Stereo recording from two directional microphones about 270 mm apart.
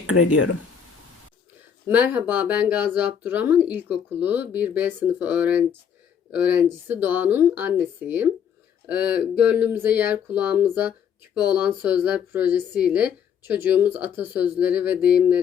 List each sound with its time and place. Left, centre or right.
0.1 s speech: left
1.9 s speech: centre
9.4 s speech: centre